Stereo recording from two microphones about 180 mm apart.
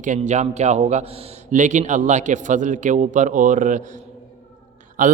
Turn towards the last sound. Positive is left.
turn(degrees=-45)  # may be behind; listen again after turning